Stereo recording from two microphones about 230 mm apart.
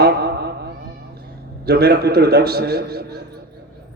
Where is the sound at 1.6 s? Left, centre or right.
Right.